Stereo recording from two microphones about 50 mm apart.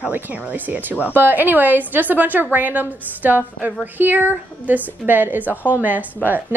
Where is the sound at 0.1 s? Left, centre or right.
Right.